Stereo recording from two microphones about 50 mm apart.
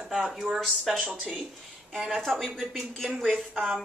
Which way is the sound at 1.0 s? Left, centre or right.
Centre.